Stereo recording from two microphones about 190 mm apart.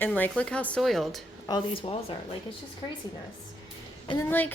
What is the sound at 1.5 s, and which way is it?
Speech, 25° left (ahead or behind).